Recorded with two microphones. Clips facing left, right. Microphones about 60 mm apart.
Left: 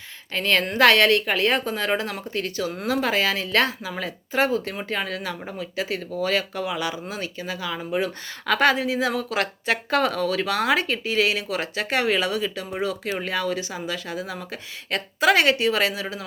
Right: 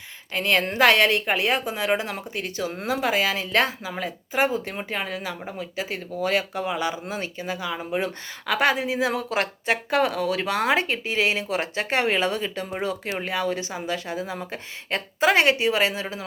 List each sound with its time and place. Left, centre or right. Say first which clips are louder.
0.3 s speech: left 1 dB; centre
3.0 s speech: right 1 dB; centre; by 16.2 s right